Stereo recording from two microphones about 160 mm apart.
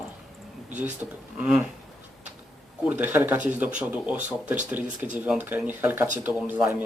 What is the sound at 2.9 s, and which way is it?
Speech, 10° right (ahead or behind).